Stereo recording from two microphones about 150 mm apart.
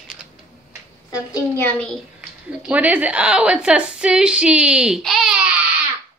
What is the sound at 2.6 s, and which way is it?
A woman's voice, 10° right (ahead or behind).